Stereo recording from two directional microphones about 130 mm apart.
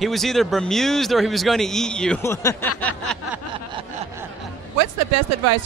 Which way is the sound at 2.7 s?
10° left (ahead or behind).